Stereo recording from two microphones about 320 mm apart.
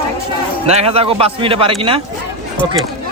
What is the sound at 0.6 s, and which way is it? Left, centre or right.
Speech, centre.